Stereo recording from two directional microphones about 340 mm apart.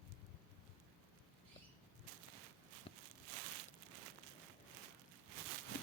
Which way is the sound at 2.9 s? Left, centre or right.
Centre.